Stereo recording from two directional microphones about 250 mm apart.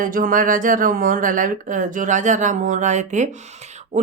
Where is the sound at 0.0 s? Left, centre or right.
Right.